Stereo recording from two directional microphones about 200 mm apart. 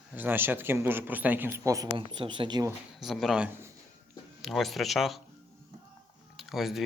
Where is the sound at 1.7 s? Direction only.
20° right (ahead or behind).